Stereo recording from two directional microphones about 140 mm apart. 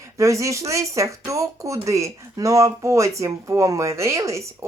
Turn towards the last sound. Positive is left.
turn(degrees=-20)  # may be behind; listen again after turning